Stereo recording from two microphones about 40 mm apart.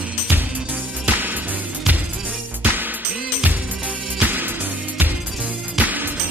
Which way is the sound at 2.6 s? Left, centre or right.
Right.